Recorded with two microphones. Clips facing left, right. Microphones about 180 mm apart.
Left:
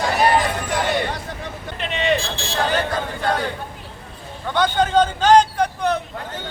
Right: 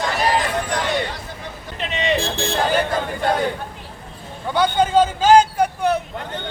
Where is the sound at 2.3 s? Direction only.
55° right (ahead or behind).